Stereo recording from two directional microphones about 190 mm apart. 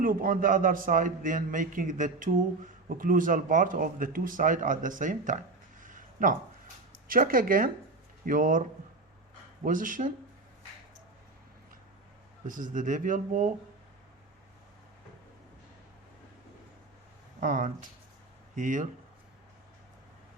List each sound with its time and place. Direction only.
0.0 s a man's voice: 45° right (ahead or behind)
5.8 s a sound: 45° right (ahead or behind)
7.1 s a man's voice: 45° right (ahead or behind)
9.6 s a man's voice: 45° right (ahead or behind)
12.5 s a man's voice: 45° right (ahead or behind)
17.4 s speech: 45° right (ahead or behind)